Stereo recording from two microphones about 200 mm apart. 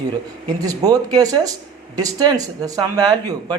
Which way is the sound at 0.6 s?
20° right (ahead or behind).